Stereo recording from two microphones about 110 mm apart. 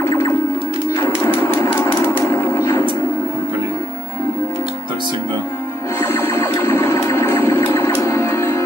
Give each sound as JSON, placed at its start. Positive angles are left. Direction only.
{"t": 0.0, "sound": "music", "side_deg": 20}
{"t": 5.9, "sound": "music", "side_deg": 20}